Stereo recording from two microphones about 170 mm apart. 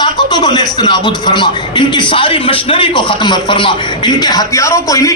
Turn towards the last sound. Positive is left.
turn(degrees=20)  # may be behind; listen again after turning